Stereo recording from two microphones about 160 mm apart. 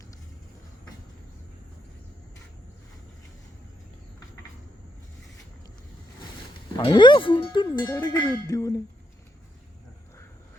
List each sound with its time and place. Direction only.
6.7 s speech: 30° left (ahead or behind)